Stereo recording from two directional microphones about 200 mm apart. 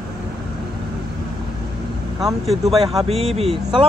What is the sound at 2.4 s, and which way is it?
Speech, centre (ahead or behind).